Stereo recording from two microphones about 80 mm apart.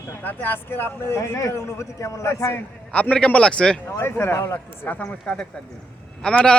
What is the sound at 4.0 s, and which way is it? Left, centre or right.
Speech, left.